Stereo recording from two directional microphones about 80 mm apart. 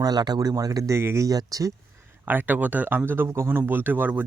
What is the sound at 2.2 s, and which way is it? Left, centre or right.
Speech, right.